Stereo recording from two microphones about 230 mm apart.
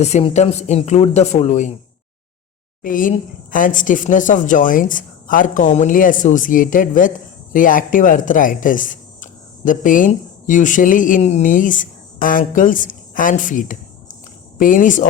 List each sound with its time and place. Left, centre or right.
0.0 s speech: left
2.8 s a woman's voice: left